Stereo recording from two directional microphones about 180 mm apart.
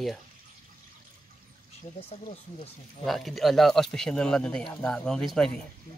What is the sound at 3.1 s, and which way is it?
Speech, centre (ahead or behind).